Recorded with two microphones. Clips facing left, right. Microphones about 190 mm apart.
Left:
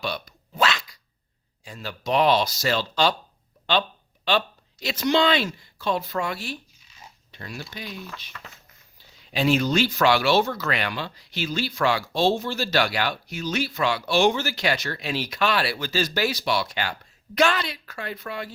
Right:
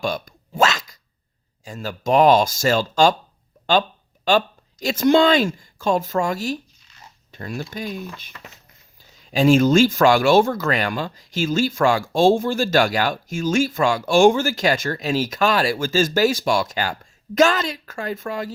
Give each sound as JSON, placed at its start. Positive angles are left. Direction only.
{"t": 0.0, "sound": "a sound", "side_deg": -45}
{"t": 1.6, "sound": "speech", "side_deg": -45}
{"t": 4.3, "sound": "speech", "side_deg": -45}
{"t": 8.3, "sound": "speech", "side_deg": -20}
{"t": 9.0, "sound": "speech", "side_deg": -45}